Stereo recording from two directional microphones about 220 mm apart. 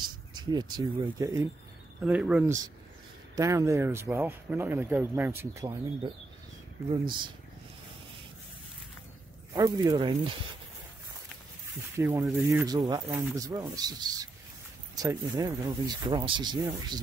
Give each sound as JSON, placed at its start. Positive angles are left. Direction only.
{"t": 0.5, "sound": "speech", "side_deg": -20}
{"t": 6.9, "sound": "speech", "side_deg": -20}
{"t": 9.5, "sound": "speech", "side_deg": -15}
{"t": 12.0, "sound": "speech", "side_deg": -10}